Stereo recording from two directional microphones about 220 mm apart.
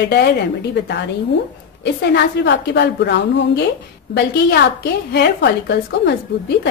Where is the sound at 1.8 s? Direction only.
50° left (ahead or behind).